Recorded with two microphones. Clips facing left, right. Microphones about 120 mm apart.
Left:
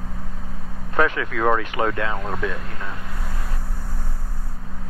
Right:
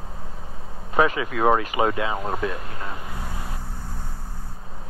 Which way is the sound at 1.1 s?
5° right (ahead or behind).